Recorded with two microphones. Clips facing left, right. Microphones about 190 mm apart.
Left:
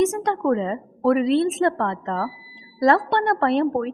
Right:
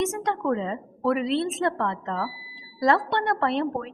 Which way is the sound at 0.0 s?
45° left (ahead or behind).